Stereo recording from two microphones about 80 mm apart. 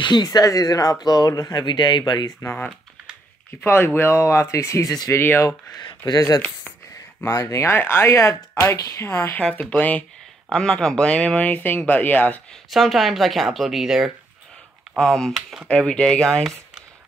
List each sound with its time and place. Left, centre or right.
0.0 s speech: left
3.6 s speech: left
5.8 s speech: left
7.2 s speech: left
8.1 s speech: left
9.6 s speech: centre
10.5 s speech: centre
12.7 s speech: centre
15.0 s speech: centre